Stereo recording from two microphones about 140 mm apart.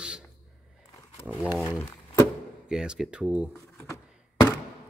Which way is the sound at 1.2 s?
10° right (ahead or behind).